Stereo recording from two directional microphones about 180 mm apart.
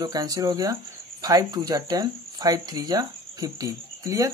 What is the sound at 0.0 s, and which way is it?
Speech, 20° right (ahead or behind).